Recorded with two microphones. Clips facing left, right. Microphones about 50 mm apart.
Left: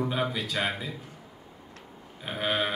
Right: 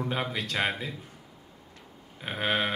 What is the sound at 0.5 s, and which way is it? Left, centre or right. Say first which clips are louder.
Speech: right 1 dB; centre.